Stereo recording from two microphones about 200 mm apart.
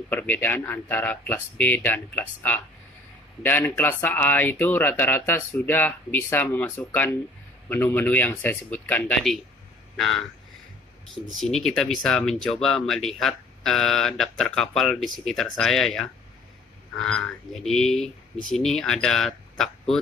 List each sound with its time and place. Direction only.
0.1 s speech: 10° left (ahead or behind)
11.2 s speech: centre (ahead or behind)
17.6 s speech: centre (ahead or behind)